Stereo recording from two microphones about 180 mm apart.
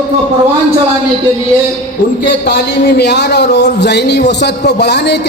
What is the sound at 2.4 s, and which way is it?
A man's voice, 65° left (ahead or behind).